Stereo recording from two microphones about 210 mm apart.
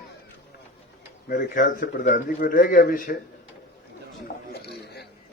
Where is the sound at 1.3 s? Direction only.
40° left (ahead or behind).